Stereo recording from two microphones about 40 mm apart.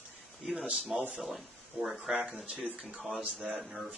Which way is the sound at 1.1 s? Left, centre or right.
Centre.